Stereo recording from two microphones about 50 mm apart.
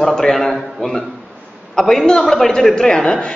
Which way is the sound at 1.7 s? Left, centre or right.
Centre.